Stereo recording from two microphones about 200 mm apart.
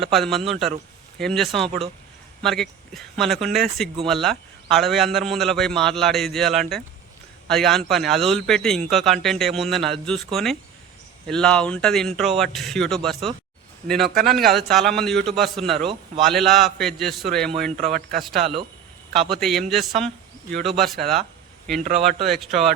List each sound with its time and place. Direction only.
0.0 s a man's voice: centre (ahead or behind)
17.7 s a man's voice: 35° right (ahead or behind)
18.3 s a man's voice: centre (ahead or behind)